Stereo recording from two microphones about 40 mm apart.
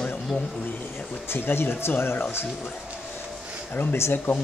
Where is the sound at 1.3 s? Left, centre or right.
Left.